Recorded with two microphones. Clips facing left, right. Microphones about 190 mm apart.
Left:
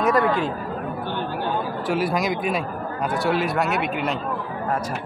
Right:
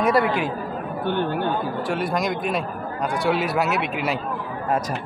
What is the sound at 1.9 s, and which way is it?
Speech, centre (ahead or behind).